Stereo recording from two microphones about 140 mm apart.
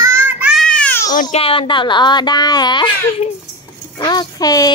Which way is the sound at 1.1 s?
70° left (ahead or behind).